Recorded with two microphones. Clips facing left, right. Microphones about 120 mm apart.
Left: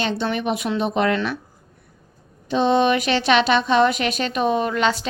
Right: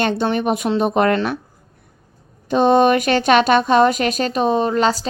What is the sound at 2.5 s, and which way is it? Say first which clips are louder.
A woman's voice: right 4 dB; 50° right (ahead or behind).